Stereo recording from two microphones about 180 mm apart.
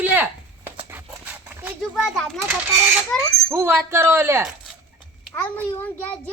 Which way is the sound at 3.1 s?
5° left (ahead or behind).